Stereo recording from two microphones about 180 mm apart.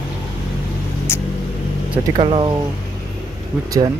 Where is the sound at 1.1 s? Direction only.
15° left (ahead or behind).